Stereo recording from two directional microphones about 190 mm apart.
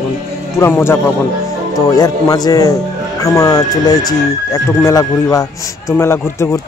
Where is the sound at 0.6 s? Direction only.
10° left (ahead or behind).